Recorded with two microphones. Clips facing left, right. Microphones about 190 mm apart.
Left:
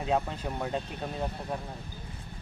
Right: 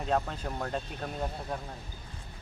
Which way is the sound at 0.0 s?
5° left (ahead or behind).